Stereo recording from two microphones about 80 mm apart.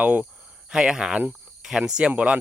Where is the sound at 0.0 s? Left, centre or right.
Centre.